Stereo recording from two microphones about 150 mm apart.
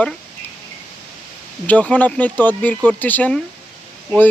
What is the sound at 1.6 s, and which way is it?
Speech, 10° left (ahead or behind).